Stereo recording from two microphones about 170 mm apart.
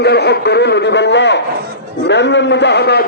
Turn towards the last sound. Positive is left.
turn(degrees=75)  # may be behind; listen again after turning